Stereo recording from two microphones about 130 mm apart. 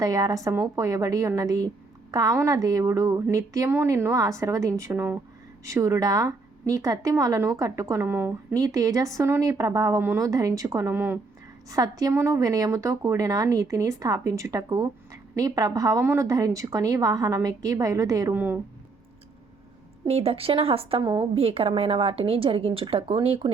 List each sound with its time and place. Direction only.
0.0 s a woman's voice: 30° right (ahead or behind)
0.5 s a woman's voice: 15° right (ahead or behind)
0.9 s a woman's voice: 25° right (ahead or behind)
8.5 s a woman's voice: 25° right (ahead or behind)
11.7 s a woman's voice: 30° right (ahead or behind)
18.3 s a woman's voice: 15° right (ahead or behind)
20.1 s a woman's voice: 50° right (ahead or behind)
21.0 s a woman's voice: 40° right (ahead or behind)